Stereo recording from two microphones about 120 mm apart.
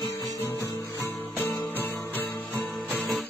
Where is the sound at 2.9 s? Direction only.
5° left (ahead or behind).